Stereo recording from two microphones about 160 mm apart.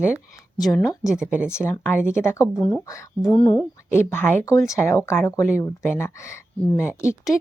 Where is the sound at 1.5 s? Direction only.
15° left (ahead or behind).